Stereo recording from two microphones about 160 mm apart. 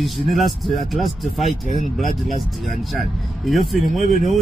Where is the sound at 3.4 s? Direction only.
Centre (ahead or behind).